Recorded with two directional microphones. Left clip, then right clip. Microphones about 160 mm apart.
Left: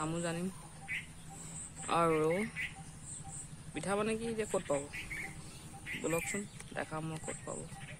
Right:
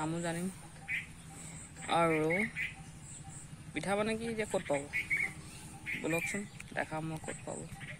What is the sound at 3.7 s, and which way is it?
Speech, 10° left (ahead or behind).